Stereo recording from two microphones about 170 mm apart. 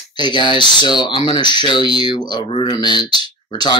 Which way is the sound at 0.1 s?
25° left (ahead or behind).